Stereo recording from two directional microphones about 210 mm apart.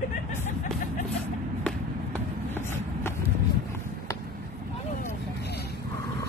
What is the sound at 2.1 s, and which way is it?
Vehicle, 10° left (ahead or behind).